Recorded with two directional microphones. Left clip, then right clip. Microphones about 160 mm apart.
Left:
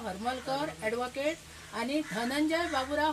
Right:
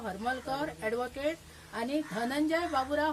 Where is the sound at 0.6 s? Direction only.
25° right (ahead or behind).